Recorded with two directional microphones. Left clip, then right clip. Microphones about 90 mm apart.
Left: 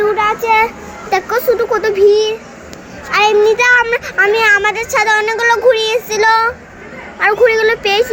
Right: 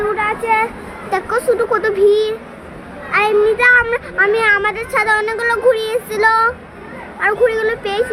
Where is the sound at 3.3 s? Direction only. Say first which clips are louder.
Even; 30° left (ahead or behind).